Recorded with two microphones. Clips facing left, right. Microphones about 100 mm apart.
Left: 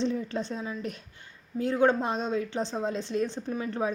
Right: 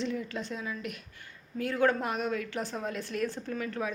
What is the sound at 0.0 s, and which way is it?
A woman's voice, 30° left (ahead or behind).